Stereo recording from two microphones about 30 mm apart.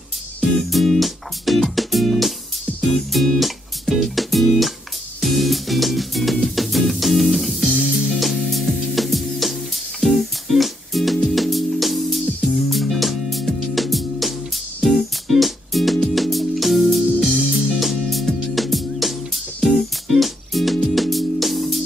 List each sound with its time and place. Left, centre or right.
0.4 s music: centre
7.7 s music: right
8.1 s music: centre